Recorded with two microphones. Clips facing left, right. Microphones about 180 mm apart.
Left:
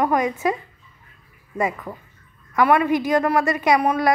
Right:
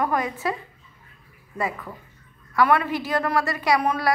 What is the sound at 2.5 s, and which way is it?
A woman's voice, 15° left (ahead or behind).